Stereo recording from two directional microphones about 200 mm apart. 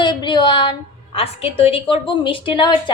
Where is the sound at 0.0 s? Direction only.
25° left (ahead or behind).